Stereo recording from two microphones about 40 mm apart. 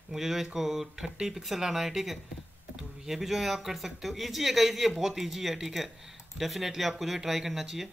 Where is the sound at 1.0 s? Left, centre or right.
Right.